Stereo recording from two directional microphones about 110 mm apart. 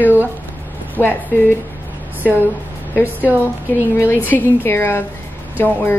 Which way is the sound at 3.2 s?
15° right (ahead or behind).